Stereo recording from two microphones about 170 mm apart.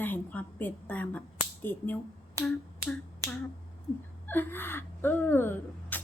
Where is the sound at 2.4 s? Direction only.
20° right (ahead or behind).